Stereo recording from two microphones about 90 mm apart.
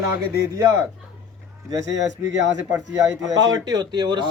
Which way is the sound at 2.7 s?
40° right (ahead or behind).